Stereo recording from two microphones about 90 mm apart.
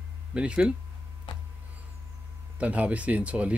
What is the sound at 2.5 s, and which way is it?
Speech, 15° right (ahead or behind).